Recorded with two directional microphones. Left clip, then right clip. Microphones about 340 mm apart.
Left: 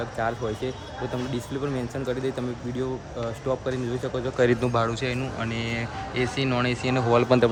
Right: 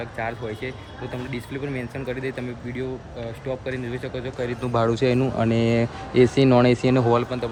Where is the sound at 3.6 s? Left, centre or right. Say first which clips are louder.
Left 1 dB; centre.